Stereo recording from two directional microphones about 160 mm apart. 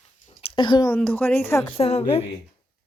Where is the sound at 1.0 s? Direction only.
10° left (ahead or behind).